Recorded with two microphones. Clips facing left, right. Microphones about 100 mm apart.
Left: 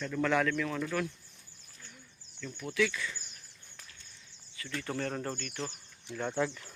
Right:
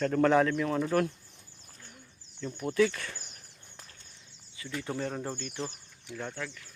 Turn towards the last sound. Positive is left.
turn(degrees=20)  # may be behind; listen again after turning